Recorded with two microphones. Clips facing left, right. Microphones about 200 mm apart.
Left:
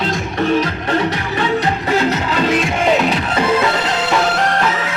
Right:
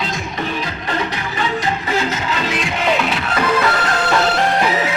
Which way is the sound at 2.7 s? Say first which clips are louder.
Left 1 dB; 40° left (ahead or behind).